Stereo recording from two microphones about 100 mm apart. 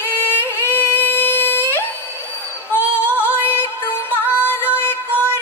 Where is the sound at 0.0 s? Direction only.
25° left (ahead or behind).